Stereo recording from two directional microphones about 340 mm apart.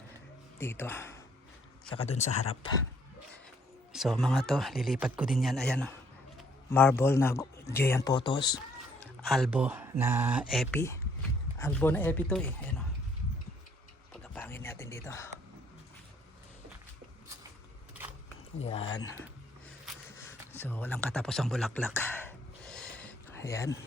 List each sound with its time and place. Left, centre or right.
0.6 s speech: centre
2.0 s speech: centre
3.9 s speech: centre
9.0 s speech: centre
14.2 s a sound: centre
18.6 s speech: centre
19.8 s a sound: centre